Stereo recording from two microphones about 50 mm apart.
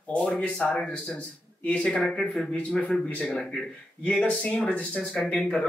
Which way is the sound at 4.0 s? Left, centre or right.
Left.